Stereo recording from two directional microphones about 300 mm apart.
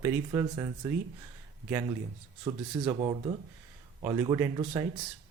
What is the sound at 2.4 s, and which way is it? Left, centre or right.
Speech, centre.